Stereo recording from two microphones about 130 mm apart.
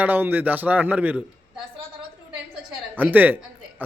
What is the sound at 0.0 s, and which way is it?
Speech, 15° right (ahead or behind).